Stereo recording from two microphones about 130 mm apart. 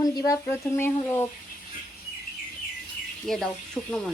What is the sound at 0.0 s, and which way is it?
Speech, 30° left (ahead or behind).